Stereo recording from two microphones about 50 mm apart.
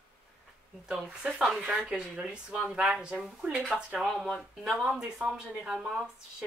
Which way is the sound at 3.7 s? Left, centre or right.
Centre.